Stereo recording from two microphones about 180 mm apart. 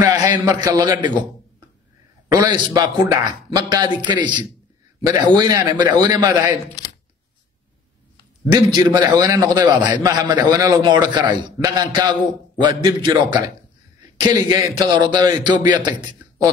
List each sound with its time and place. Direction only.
0.0 s a sound: 20° right (ahead or behind)
0.5 s a man's voice: 20° right (ahead or behind)
2.2 s a man's voice: 20° right (ahead or behind)
8.5 s a man's voice: 25° right (ahead or behind)